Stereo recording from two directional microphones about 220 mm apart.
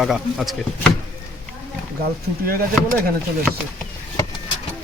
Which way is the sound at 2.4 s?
40° right (ahead or behind).